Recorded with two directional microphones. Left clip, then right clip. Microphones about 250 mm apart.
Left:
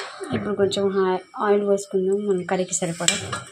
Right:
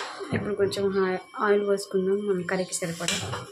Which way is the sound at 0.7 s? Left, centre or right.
Centre.